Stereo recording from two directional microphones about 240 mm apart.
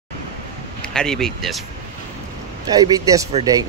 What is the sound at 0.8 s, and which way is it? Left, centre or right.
Speech, centre.